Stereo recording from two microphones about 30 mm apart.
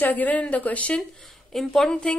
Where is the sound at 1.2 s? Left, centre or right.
Centre.